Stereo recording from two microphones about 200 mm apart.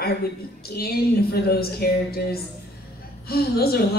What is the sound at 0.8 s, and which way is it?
A woman's voice, 50° left (ahead or behind).